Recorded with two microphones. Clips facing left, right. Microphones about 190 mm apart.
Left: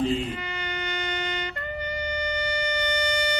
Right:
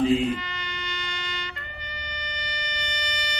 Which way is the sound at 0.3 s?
60° left (ahead or behind).